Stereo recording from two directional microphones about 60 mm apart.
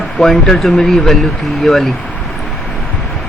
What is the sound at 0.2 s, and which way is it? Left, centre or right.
A man's voice, centre.